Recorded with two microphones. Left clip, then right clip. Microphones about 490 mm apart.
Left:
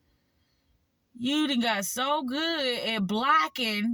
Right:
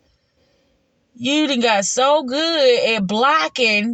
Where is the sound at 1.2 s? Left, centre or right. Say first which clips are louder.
Right 10 dB; left.